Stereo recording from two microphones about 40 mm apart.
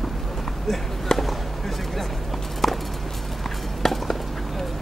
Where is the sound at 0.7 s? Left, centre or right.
Centre.